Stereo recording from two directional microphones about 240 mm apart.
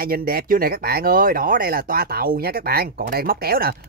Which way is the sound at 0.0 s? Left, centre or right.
Right.